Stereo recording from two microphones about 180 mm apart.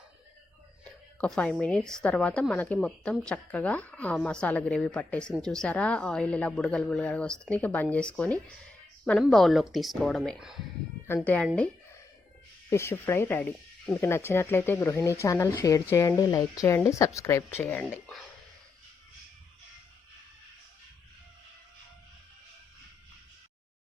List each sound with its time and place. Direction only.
1.2 s a woman's voice: 5° left (ahead or behind)
11.0 s speech: 10° left (ahead or behind)
12.7 s speech: 15° left (ahead or behind)